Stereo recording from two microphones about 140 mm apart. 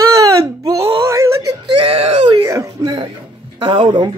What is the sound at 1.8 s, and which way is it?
Speech, 45° right (ahead or behind).